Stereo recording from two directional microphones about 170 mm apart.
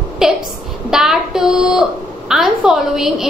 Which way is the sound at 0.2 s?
5° right (ahead or behind).